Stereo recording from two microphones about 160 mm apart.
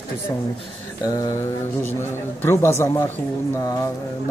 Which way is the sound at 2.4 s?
15° left (ahead or behind).